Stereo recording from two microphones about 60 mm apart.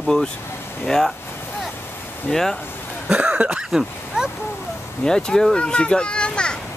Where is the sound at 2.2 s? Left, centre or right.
Centre.